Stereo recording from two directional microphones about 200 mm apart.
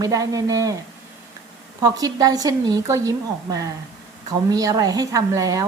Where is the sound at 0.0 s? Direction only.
15° right (ahead or behind).